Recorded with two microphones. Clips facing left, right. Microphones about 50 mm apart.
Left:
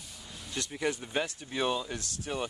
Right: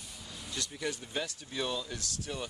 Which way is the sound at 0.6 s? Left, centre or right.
Left.